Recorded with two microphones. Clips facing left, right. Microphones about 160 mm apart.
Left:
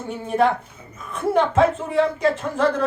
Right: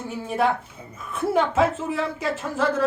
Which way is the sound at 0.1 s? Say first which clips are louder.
Left 4 dB; 5° right (ahead or behind).